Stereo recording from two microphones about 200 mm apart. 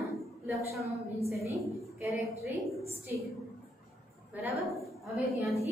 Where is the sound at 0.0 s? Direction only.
Centre (ahead or behind).